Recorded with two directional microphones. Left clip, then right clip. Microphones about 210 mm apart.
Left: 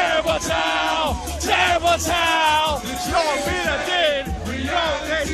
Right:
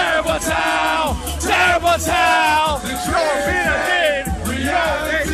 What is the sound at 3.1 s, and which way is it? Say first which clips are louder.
Music: right 3 dB; 25° left (ahead or behind).